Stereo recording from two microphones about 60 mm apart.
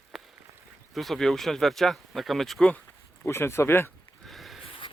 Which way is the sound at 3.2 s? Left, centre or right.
Left.